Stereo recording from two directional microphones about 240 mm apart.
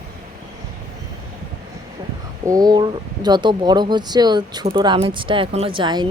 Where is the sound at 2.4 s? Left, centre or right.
Centre.